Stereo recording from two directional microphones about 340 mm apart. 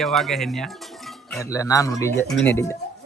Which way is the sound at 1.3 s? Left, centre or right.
Centre.